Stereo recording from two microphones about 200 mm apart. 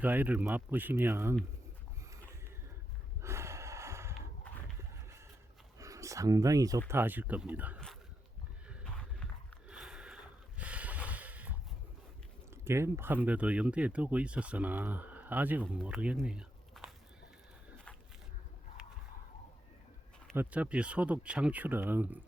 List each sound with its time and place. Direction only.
0.0 s speech: 10° right (ahead or behind)
3.2 s snort: 15° right (ahead or behind)
4.5 s a sound: 5° left (ahead or behind)
5.8 s speech: 15° right (ahead or behind)
8.6 s a sound: 5° right (ahead or behind)
12.6 s speech: 15° right (ahead or behind)
20.3 s speech: 10° right (ahead or behind)